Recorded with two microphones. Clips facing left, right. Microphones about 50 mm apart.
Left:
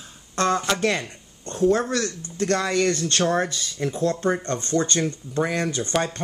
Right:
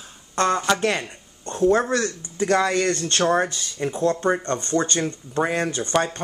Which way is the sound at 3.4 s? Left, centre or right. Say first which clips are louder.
Right 1 dB; centre.